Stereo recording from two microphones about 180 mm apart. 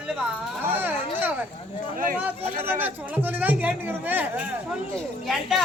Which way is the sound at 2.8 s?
10° right (ahead or behind).